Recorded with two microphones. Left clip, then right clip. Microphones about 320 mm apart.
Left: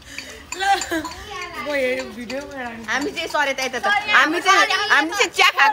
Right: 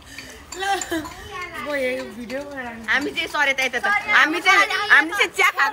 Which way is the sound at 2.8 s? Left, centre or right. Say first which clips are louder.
Right 2 dB; left.